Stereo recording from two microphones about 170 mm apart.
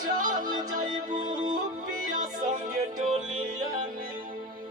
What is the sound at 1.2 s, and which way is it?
Music, 25° right (ahead or behind).